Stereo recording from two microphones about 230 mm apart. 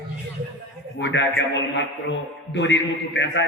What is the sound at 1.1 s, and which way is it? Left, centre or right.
Speech, left.